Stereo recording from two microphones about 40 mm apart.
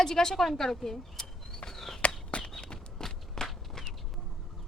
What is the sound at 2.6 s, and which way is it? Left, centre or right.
Walk, left.